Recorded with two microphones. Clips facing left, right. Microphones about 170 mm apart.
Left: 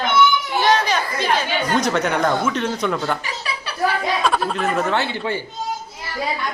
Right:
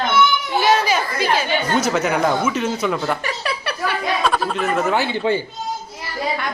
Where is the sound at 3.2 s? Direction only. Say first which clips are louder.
Right 4 dB; 60° right (ahead or behind).